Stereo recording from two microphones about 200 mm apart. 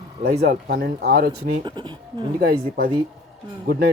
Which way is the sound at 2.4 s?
50° right (ahead or behind).